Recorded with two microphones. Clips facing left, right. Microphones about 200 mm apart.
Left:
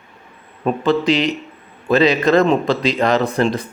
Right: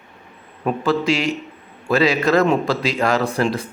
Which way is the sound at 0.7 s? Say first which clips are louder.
Left 3 dB; centre (ahead or behind).